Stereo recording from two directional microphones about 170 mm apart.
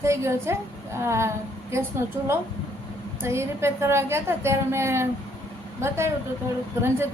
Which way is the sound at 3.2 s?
15° right (ahead or behind).